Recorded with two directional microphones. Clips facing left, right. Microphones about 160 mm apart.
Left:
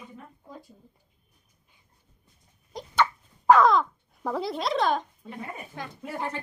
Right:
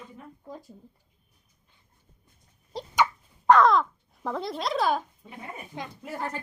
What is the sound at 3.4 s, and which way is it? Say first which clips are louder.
Speech: even; centre (ahead or behind).